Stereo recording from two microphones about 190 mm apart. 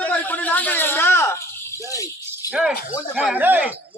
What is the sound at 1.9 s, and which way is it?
Music, 15° left (ahead or behind).